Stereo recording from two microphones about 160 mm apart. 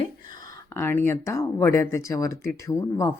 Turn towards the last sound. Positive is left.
turn(degrees=20)  # may be behind; listen again after turning